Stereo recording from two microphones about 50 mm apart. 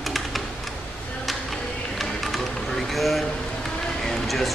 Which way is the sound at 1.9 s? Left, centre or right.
Centre.